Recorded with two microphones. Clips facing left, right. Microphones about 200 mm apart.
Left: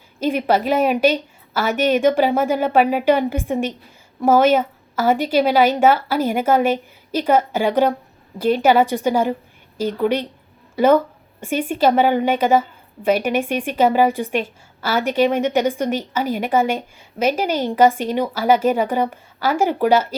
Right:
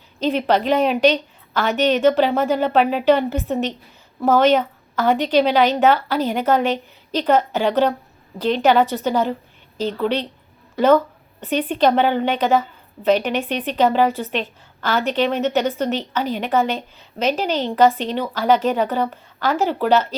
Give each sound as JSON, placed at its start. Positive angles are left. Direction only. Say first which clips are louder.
{"t": 0.2, "sound": "a woman's voice", "louder": "even", "side_deg": 10}
{"t": 10.8, "sound": "a sound", "louder": "even", "side_deg": 10}
{"t": 11.7, "sound": "a woman's voice", "louder": "left 1 dB", "side_deg": 10}